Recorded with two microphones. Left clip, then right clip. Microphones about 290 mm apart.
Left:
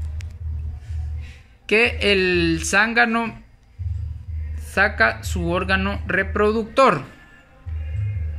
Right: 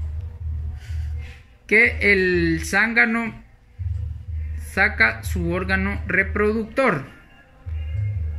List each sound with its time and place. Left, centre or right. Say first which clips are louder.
1.7 s speech: right 1 dB; centre
4.6 s a woman's voice: even; centre